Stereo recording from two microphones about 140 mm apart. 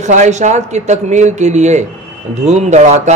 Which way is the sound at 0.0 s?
60° right (ahead or behind).